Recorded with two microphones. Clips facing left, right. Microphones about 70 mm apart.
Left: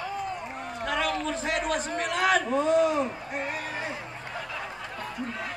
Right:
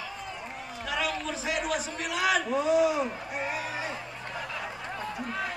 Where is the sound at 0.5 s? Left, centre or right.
Left.